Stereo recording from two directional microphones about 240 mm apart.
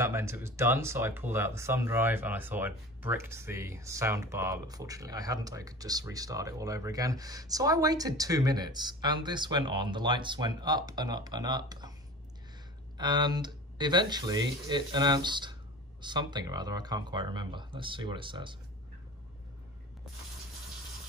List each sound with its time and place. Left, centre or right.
0.0 s speech: centre
12.9 s speech: centre